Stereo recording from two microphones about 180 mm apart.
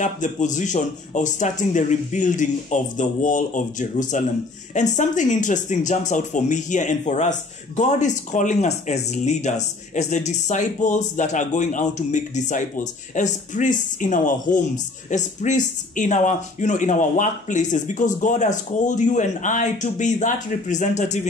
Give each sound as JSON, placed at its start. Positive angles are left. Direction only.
{"t": 0.0, "sound": "a man's voice", "side_deg": 45}